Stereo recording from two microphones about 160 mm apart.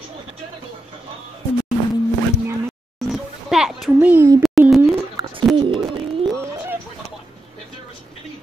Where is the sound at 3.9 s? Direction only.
10° right (ahead or behind).